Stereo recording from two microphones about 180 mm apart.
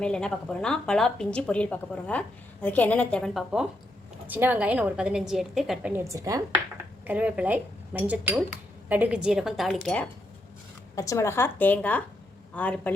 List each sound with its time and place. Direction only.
0.0 s a woman's voice: 5° left (ahead or behind)
6.1 s speech: 20° right (ahead or behind)
7.1 s a woman's voice: 5° right (ahead or behind)
10.9 s a woman's voice: 15° left (ahead or behind)